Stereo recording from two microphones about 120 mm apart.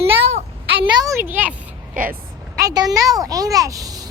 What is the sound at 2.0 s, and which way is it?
Speech, 90° right.